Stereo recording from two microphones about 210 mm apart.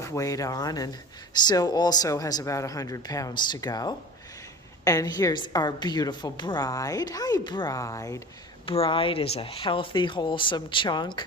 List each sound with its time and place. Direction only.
0.0 s a woman's voice: 15° left (ahead or behind)
8.6 s speech: 25° left (ahead or behind)